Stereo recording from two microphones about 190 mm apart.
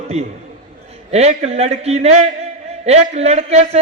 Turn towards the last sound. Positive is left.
turn(degrees=-35)  # may be behind; listen again after turning